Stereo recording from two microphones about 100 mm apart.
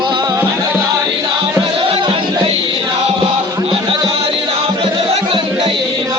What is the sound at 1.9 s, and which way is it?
Music, 65° right (ahead or behind).